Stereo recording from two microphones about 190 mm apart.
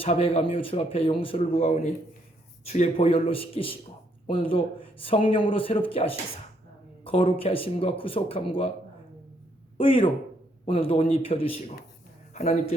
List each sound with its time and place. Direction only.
0.0 s speech: 30° left (ahead or behind)
9.7 s a man's voice: 30° left (ahead or behind)